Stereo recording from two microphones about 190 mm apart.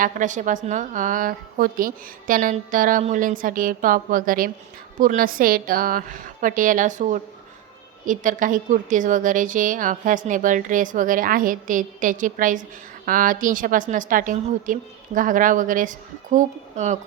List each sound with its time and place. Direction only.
0.0 s a woman's voice: 40° right (ahead or behind)